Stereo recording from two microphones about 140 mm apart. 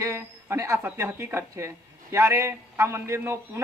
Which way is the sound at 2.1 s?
20° right (ahead or behind).